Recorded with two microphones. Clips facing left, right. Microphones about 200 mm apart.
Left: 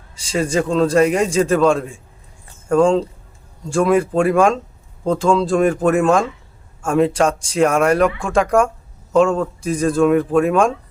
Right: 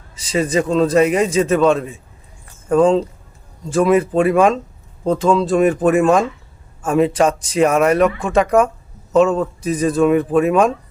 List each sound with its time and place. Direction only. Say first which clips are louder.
0.5 s speech: right 1 dB; 5° right (ahead or behind)